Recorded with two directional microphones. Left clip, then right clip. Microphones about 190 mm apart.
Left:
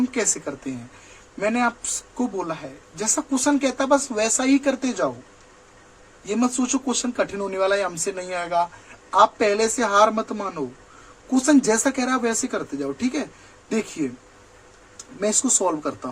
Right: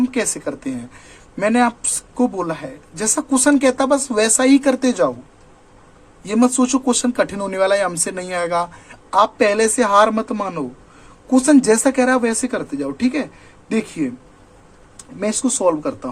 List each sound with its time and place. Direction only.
0.1 s speech: 20° right (ahead or behind)
6.2 s speech: 25° right (ahead or behind)
15.2 s speech: 10° right (ahead or behind)